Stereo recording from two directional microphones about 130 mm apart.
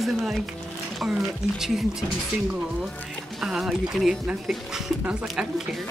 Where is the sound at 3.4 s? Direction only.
5° right (ahead or behind).